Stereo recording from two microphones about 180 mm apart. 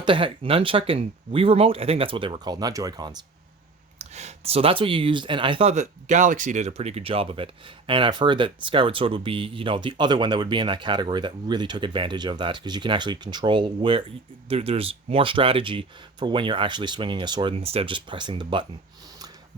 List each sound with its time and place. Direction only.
0.0 s speech: 25° right (ahead or behind)
3.9 s speech: 35° right (ahead or behind)